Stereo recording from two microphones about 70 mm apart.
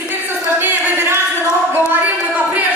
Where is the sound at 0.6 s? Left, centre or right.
Right.